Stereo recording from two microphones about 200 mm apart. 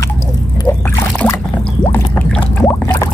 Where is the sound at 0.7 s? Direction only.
15° left (ahead or behind).